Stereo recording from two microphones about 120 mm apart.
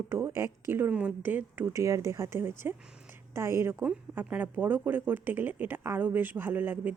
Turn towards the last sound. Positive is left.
turn(degrees=-15)  # may be behind; listen again after turning